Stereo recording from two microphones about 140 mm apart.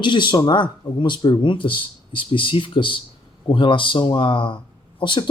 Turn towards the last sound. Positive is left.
turn(degrees=35)  # may be behind; listen again after turning